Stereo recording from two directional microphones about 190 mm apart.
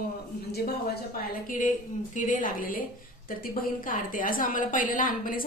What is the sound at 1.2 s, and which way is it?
Speech, 45° left (ahead or behind).